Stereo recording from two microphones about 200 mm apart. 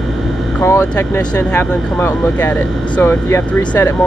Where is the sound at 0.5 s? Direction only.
10° left (ahead or behind).